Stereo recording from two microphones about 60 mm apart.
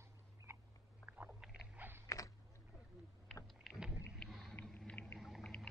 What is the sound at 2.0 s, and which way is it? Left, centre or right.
Creak, left.